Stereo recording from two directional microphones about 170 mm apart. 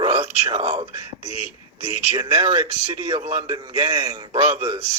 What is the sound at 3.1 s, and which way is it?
Speech, 40° right (ahead or behind).